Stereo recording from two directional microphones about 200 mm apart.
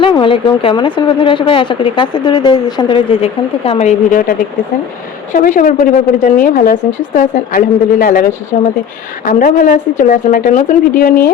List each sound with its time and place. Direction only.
0.0 s a woman's voice: 25° left (ahead or behind)